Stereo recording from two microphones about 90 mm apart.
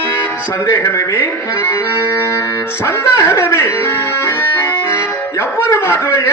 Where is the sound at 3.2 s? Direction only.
25° left (ahead or behind).